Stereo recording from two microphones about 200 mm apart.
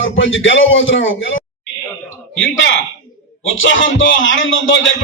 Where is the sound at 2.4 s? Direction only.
65° left (ahead or behind).